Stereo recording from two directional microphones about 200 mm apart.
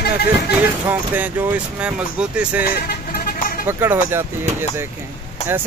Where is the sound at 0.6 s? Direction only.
10° right (ahead or behind).